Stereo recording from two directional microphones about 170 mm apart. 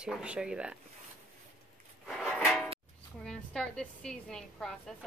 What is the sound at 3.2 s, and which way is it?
A woman's voice, 5° left (ahead or behind).